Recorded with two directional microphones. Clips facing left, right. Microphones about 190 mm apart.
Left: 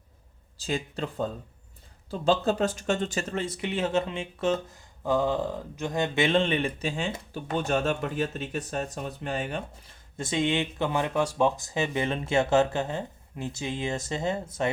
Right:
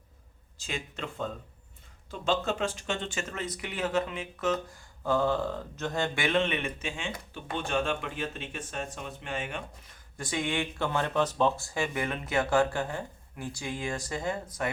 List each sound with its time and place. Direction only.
0.5 s speech: 35° left (ahead or behind)
5.0 s speech: 15° left (ahead or behind)